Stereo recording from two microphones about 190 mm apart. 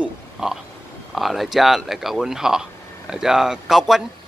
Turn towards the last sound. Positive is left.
turn(degrees=0)  # may be behind; listen again after turning